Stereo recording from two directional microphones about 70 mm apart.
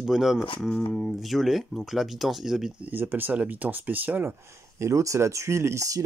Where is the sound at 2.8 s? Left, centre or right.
Right.